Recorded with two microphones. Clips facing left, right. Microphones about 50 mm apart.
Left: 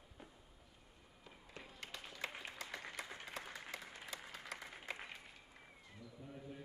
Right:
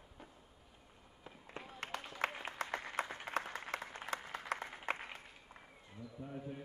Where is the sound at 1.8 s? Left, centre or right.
Right.